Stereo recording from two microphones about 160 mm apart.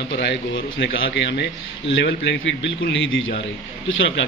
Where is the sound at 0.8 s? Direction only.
90° left.